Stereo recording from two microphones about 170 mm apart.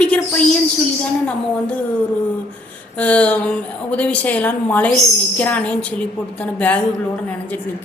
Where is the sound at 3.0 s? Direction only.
10° left (ahead or behind).